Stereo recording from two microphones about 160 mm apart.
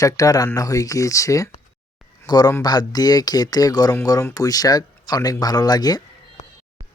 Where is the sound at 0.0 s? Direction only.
20° left (ahead or behind).